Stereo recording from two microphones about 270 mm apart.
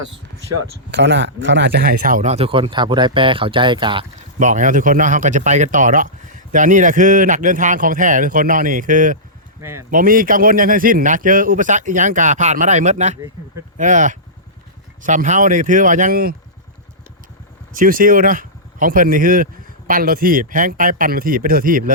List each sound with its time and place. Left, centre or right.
0.9 s speech: right; by 4.0 s centre
4.4 s speech: right
9.6 s speech: centre
9.9 s speech: right
17.7 s a man's voice: right